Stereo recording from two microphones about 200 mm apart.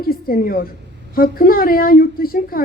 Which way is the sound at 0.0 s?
45° left (ahead or behind).